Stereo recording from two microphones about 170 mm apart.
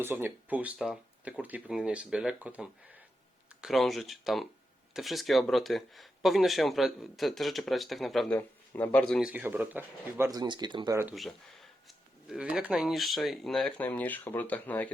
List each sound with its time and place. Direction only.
0.0 s speech: 15° right (ahead or behind)
8.4 s speech: 10° left (ahead or behind)
9.3 s speech: 10° right (ahead or behind); by 10.9 s 25° right (ahead or behind)
11.1 s speech: centre (ahead or behind)